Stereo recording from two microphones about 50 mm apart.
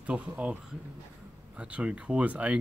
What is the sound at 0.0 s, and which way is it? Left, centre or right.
Speech, right.